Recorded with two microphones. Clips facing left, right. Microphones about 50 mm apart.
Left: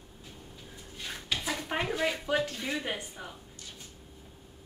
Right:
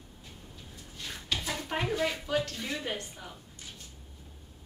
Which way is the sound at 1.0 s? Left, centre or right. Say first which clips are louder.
Even; centre.